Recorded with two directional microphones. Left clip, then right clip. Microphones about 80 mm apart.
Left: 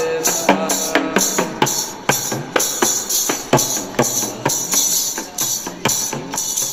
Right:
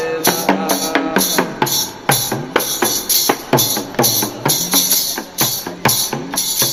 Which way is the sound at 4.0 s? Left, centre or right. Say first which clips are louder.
Right 2 dB; right.